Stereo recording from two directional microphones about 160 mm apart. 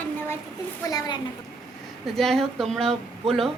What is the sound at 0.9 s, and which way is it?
Speech, 25° left (ahead or behind).